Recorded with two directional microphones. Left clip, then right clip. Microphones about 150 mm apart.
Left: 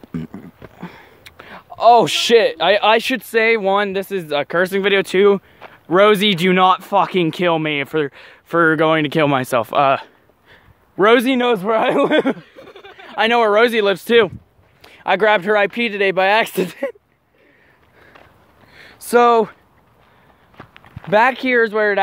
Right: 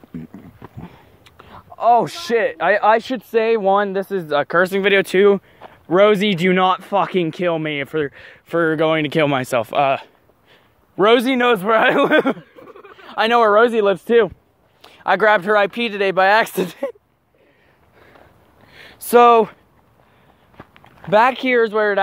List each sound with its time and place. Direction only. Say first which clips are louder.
0.1 s a sound: left 5 dB; 60° left (ahead or behind)
2.7 s speech: even; 35° left (ahead or behind)
3.2 s speech: left 2 dB; 15° left (ahead or behind)
8.5 s speech: left 3 dB; 35° left (ahead or behind)
13.0 s a sound: even; 30° left (ahead or behind)
13.5 s speech: even; 15° left (ahead or behind)
14.8 s speech: even; 35° left (ahead or behind)
18.7 s a sound: right 1 dB; 5° left (ahead or behind)
20.5 s walk: left 2 dB; 65° right (ahead or behind)
21.1 s speech: even; 20° left (ahead or behind)